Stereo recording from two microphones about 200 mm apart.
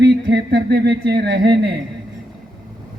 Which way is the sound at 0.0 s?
60° right (ahead or behind).